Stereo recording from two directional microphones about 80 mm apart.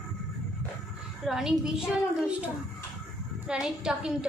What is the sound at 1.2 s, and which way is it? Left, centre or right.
A child's voice, centre.